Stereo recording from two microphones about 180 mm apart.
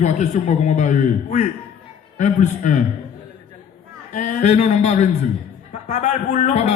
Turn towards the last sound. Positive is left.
turn(degrees=40)  # may be behind; listen again after turning